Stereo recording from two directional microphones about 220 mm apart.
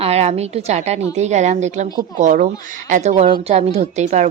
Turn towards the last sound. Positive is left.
turn(degrees=-30)  # may be behind; listen again after turning